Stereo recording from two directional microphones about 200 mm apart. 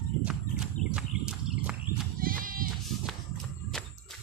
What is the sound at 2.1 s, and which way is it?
Goat, 45° right (ahead or behind).